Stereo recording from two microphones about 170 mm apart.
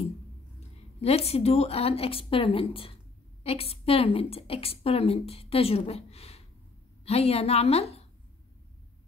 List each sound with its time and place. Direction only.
0.6 s a woman's voice: 35° left (ahead or behind)